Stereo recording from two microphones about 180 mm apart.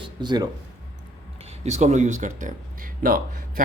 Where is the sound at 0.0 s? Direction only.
25° right (ahead or behind).